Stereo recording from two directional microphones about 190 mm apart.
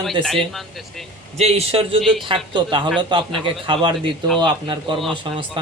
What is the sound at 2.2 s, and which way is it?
A man's voice, 25° right (ahead or behind).